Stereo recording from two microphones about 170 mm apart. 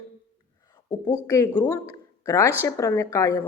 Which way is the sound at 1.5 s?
20° left (ahead or behind).